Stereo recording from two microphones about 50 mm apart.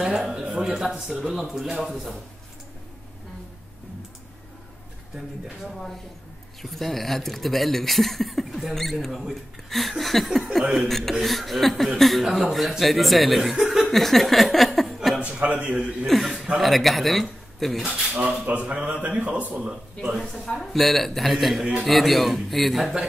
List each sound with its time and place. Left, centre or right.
0.0 s a man's voice: centre
5.7 s speech: centre
10.6 s a man's voice: centre
10.9 s speech: centre
13.6 s chuckle: centre
13.9 s a sound: centre
15.3 s a man's voice: right
16.1 s speech: centre
17.8 s a man's voice: centre
18.4 s a man's voice: right
20.0 s a man's voice: centre
20.4 s speech: centre